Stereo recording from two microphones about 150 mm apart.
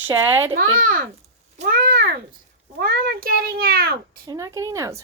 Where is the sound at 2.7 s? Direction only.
90° right.